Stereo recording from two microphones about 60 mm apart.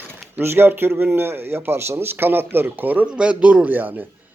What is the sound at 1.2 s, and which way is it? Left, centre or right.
A man's voice, right.